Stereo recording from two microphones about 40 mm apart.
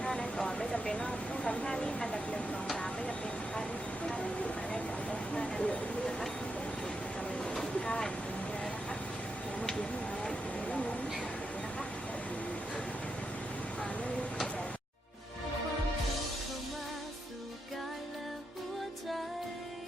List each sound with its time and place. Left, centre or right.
0.0 s vehicle: left
0.7 s speech: left
1.6 s vehicle: left
5.3 s a sound: left
7.7 s vehicle: left
10.7 s vehicle: left